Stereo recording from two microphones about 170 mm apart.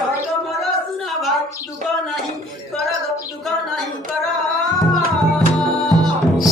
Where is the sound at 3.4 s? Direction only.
Centre (ahead or behind).